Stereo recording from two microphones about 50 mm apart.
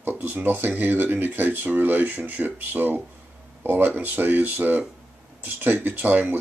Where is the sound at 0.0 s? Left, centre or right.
Right.